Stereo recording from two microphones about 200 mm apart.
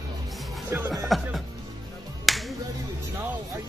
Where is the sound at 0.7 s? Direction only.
10° right (ahead or behind).